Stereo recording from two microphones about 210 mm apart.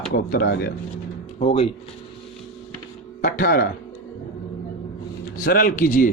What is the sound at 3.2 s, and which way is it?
Speech, 45° left (ahead or behind).